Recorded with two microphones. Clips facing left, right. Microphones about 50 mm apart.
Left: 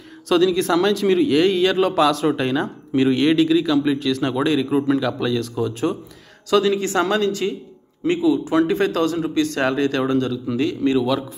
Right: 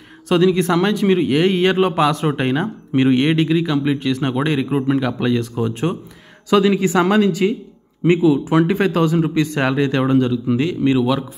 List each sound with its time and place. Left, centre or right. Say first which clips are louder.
0.3 s a man's voice: right 2 dB; right
8.0 s a man's voice: right 4 dB; right
8.9 s a man's voice: right 3 dB; centre